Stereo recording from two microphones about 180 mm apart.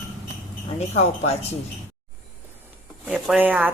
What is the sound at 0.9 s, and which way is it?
Speech, 35° left (ahead or behind).